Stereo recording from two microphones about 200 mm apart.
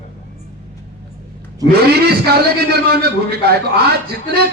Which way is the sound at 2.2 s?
50° right (ahead or behind).